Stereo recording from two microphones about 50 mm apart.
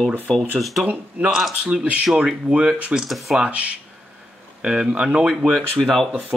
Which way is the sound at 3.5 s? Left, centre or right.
Right.